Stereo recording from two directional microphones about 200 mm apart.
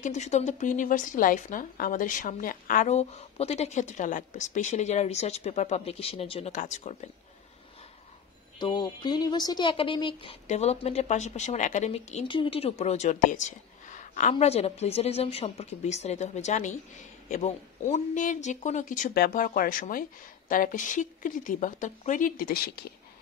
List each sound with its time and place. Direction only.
0.0 s a woman's voice: 35° left (ahead or behind)
8.5 s a woman's voice: 20° left (ahead or behind); by 22.9 s 50° left (ahead or behind)